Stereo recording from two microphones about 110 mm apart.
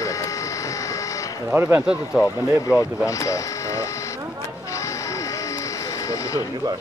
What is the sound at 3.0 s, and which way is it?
Speech, 30° left (ahead or behind).